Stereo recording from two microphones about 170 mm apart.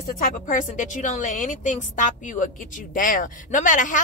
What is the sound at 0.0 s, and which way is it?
A woman's voice, 50° left (ahead or behind).